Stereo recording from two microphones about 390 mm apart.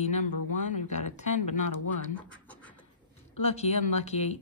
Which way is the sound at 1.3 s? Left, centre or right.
Left.